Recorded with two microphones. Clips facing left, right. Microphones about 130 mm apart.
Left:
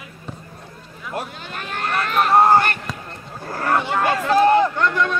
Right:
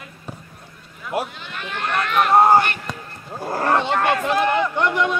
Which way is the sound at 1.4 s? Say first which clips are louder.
Left 1 dB; 45° left (ahead or behind).